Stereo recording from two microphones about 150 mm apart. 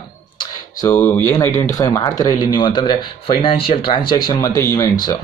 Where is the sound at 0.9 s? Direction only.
10° left (ahead or behind).